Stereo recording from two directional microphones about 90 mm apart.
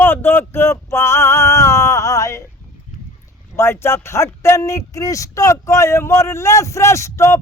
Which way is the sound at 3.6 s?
30° left (ahead or behind).